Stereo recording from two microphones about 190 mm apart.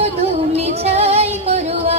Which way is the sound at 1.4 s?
35° right (ahead or behind).